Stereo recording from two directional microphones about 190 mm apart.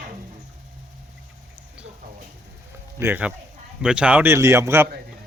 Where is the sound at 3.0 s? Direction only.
10° right (ahead or behind).